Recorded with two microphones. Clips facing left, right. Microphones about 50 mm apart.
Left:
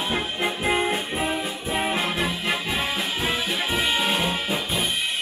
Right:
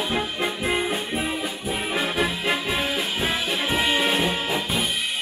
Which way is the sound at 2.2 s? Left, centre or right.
Right.